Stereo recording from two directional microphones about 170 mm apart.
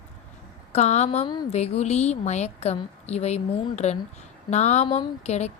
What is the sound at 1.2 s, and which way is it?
Speech, 25° left (ahead or behind).